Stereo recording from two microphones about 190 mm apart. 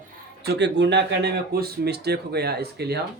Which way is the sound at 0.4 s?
65° right (ahead or behind).